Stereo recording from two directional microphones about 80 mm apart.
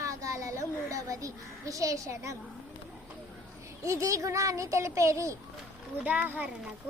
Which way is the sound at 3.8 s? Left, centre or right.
Right.